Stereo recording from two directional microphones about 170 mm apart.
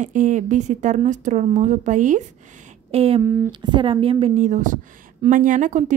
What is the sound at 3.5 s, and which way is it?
A woman's voice, 25° right (ahead or behind).